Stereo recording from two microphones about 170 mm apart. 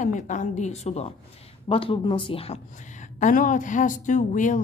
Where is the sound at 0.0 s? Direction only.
45° left (ahead or behind).